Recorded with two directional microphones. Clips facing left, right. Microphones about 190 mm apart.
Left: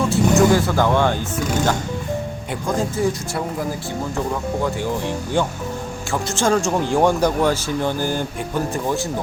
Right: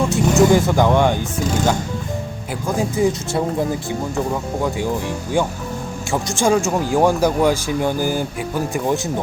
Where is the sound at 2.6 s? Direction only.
10° right (ahead or behind).